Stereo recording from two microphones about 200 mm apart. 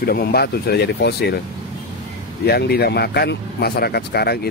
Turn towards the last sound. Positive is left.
turn(degrees=55)  # may be behind; listen again after turning